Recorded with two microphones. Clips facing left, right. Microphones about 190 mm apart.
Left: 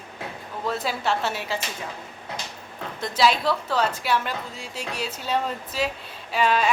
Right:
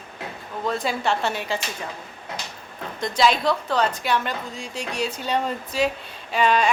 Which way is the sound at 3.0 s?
5° left (ahead or behind).